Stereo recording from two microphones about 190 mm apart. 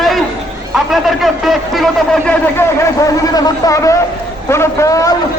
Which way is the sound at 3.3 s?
20° left (ahead or behind).